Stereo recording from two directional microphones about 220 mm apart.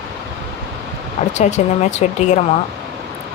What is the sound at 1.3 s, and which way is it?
Speech, 30° left (ahead or behind).